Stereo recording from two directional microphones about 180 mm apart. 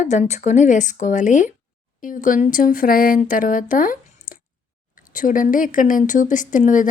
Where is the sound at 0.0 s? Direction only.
40° left (ahead or behind).